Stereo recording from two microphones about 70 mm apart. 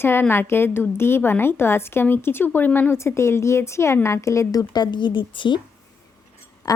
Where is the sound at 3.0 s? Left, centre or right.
Left.